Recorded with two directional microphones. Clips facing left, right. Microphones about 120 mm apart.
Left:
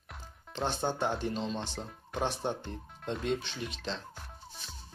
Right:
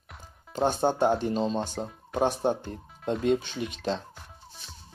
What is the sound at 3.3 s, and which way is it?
Speech, 45° right (ahead or behind).